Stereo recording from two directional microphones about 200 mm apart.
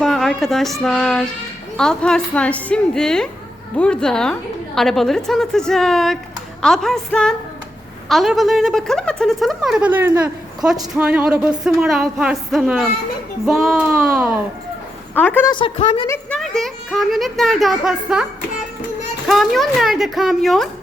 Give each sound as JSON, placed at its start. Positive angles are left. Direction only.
{"t": 0.0, "sound": "speech", "side_deg": 0}
{"t": 15.1, "sound": "a woman's voice", "side_deg": 10}
{"t": 15.4, "sound": "speech", "side_deg": 25}
{"t": 16.0, "sound": "a sound", "side_deg": 10}
{"t": 16.4, "sound": "speech", "side_deg": 0}
{"t": 19.3, "sound": "speech", "side_deg": 0}